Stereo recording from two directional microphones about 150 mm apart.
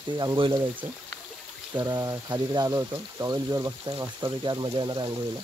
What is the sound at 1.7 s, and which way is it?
Speech, 25° right (ahead or behind).